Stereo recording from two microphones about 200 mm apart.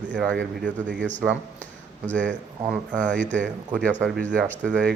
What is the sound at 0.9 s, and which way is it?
Speech, 65° right (ahead or behind).